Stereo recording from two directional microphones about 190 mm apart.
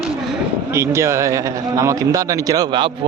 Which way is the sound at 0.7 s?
15° right (ahead or behind).